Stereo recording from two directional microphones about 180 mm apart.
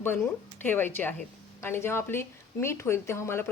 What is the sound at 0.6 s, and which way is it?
Speech, 10° left (ahead or behind).